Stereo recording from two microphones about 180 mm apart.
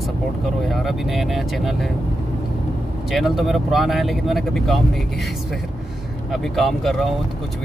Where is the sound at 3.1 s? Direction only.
Centre (ahead or behind).